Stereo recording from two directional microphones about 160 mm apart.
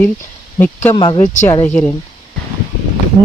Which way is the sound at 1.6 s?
10° left (ahead or behind).